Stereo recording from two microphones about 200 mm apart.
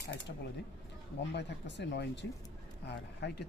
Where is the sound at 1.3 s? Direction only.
60° left (ahead or behind).